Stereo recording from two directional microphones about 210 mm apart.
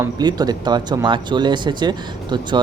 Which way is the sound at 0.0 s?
20° right (ahead or behind).